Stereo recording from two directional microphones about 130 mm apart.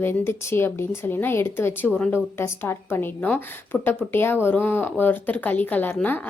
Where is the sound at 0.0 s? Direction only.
15° left (ahead or behind).